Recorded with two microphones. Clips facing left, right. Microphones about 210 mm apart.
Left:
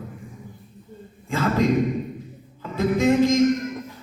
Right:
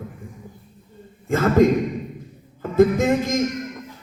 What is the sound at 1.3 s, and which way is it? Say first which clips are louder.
Speech: right 6 dB; 50° right (ahead or behind).